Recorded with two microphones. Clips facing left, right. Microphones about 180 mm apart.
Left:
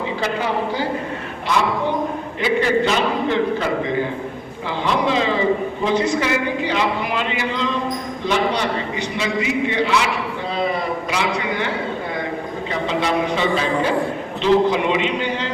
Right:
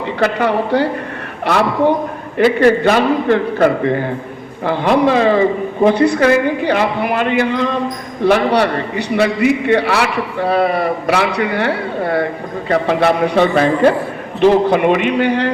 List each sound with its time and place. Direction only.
0.2 s a man's voice: 65° right (ahead or behind)
2.4 s a man's voice: 55° right (ahead or behind)